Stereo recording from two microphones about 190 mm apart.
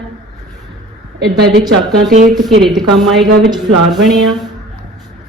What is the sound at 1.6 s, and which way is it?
Speech, 20° right (ahead or behind).